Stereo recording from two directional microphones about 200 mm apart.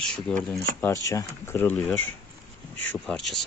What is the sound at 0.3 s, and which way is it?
Speech, 5° left (ahead or behind).